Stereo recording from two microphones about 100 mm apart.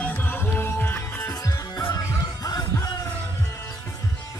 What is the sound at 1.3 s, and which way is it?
Music, 35° left (ahead or behind).